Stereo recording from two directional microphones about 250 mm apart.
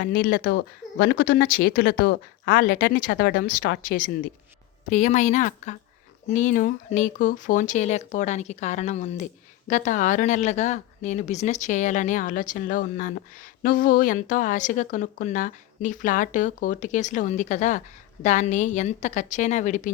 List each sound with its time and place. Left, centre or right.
0.0 s speech: left